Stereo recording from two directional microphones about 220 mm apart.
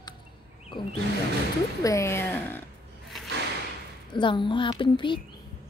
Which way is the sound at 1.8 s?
15° left (ahead or behind).